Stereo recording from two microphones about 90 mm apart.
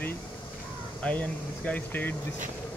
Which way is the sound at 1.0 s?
15° left (ahead or behind).